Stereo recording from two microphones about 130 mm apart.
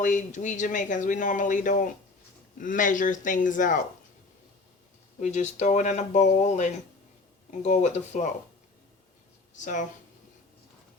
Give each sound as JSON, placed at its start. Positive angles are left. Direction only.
{"t": 0.0, "sound": "a man's voice", "side_deg": 75}
{"t": 5.2, "sound": "speech", "side_deg": 60}